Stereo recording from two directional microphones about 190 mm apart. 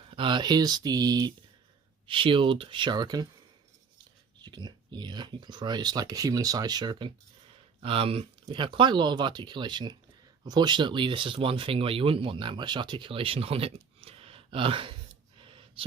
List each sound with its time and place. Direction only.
0.1 s speech: 25° right (ahead or behind)
4.4 s speech: 25° right (ahead or behind)
15.4 s a sound: 25° right (ahead or behind)